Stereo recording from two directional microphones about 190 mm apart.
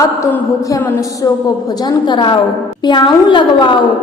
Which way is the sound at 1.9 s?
25° left (ahead or behind).